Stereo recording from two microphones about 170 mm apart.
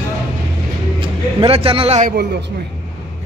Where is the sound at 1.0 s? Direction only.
30° right (ahead or behind).